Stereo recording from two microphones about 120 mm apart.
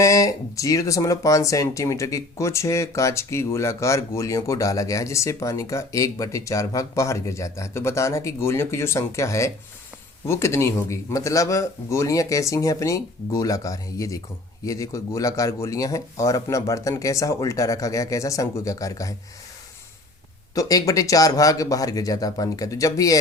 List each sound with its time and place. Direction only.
0.0 s speech: 25° left (ahead or behind)
20.6 s speech: 30° left (ahead or behind)